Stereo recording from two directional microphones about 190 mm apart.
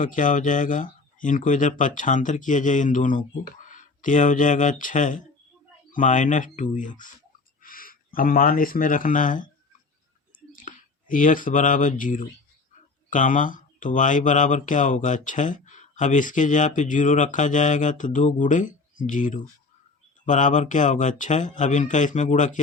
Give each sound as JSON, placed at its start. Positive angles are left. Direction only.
{"t": 0.0, "sound": "speech", "side_deg": 40}
{"t": 10.5, "sound": "speech", "side_deg": 45}